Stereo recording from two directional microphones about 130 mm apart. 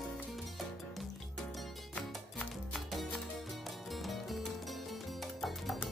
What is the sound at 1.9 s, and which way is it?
Music, 5° left (ahead or behind).